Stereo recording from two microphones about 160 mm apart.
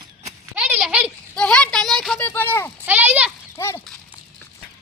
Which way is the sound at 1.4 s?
5° left (ahead or behind).